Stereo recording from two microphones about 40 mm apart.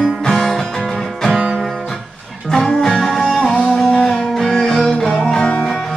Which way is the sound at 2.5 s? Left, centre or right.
Centre.